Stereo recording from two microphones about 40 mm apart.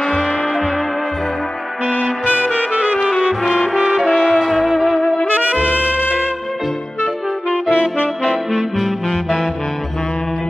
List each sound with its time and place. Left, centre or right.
0.0 s music: centre
3.0 s music: centre
3.4 s brass instrument: centre
3.7 s brass instrument: centre
4.4 s music: centre
5.3 s music: right
7.0 s music: centre
7.7 s saxophone: left
8.2 s saxophone: centre